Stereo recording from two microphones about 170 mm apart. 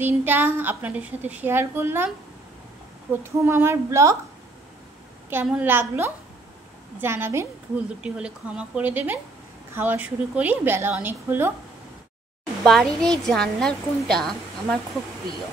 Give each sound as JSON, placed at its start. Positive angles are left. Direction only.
{"t": 0.0, "sound": "a woman's voice", "side_deg": -10}
{"t": 3.1, "sound": "a woman's voice", "side_deg": -15}
{"t": 5.3, "sound": "a woman's voice", "side_deg": -10}
{"t": 12.6, "sound": "a woman's voice", "side_deg": 0}